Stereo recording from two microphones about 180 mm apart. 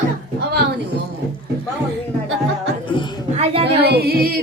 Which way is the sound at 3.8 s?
60° right (ahead or behind).